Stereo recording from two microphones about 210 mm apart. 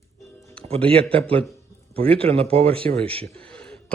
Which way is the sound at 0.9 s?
25° right (ahead or behind).